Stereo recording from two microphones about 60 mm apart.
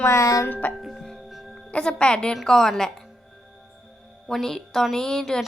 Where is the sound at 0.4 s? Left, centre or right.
Left.